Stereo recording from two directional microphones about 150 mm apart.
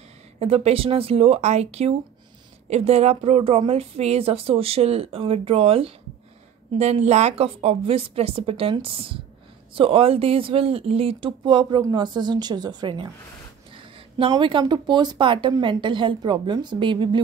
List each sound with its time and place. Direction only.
0.4 s speech: 40° right (ahead or behind)